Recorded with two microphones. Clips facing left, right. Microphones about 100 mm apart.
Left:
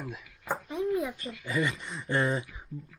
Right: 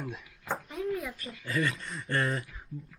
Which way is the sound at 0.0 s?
5° left (ahead or behind).